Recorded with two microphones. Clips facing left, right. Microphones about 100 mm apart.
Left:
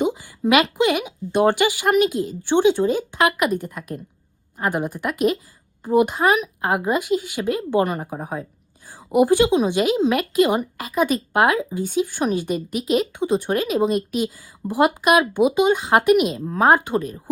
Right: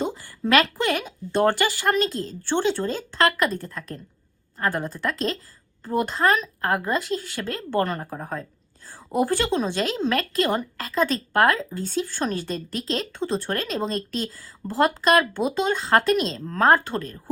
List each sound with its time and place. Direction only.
0.3 s a woman's voice: 15° left (ahead or behind)